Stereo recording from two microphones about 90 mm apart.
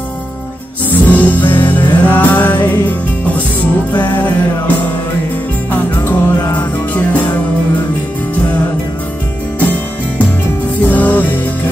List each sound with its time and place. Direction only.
0.9 s music: 15° left (ahead or behind)
4.0 s music: 20° left (ahead or behind)
9.6 s music: 15° left (ahead or behind)